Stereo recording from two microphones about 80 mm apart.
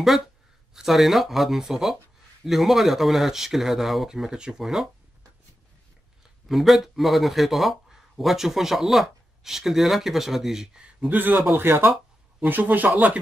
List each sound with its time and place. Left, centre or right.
0.7 s speech: centre
6.5 s speech: centre
11.1 s speech: right